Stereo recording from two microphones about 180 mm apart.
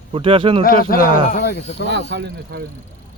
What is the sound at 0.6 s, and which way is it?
Speech, 55° left (ahead or behind).